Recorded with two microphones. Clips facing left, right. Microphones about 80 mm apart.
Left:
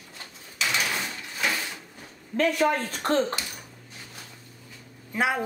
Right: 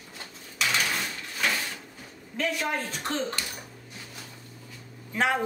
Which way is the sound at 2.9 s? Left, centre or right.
Left.